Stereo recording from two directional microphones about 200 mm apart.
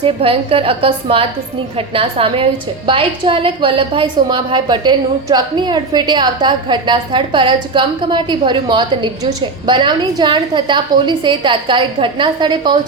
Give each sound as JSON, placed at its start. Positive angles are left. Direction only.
{"t": 0.0, "sound": "a woman's voice", "side_deg": -30}